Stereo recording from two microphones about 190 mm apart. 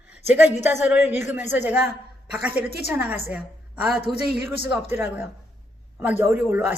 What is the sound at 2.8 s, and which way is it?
A woman's voice, 10° right (ahead or behind).